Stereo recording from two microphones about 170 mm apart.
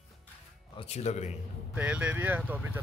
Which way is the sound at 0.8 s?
40° left (ahead or behind).